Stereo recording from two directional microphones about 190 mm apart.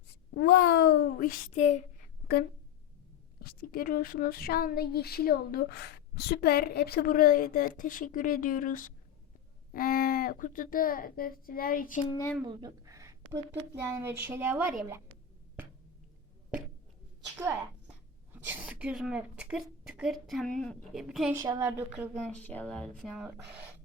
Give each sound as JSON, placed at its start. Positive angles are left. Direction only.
{"t": 0.3, "sound": "a sound", "side_deg": 60}
{"t": 1.5, "sound": "speech", "side_deg": 35}
{"t": 3.4, "sound": "a woman's voice", "side_deg": 50}
{"t": 12.4, "sound": "a sound", "side_deg": -20}
{"t": 13.9, "sound": "a woman's voice", "side_deg": -10}
{"t": 17.3, "sound": "a woman's voice", "side_deg": -10}
{"t": 21.3, "sound": "a woman's voice", "side_deg": -20}
{"t": 22.1, "sound": "speech", "side_deg": 5}